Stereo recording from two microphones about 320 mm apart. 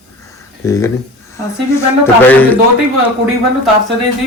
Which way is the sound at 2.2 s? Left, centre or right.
Centre.